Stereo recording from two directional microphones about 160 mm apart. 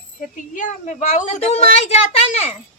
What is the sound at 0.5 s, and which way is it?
A woman's voice, 50° left (ahead or behind).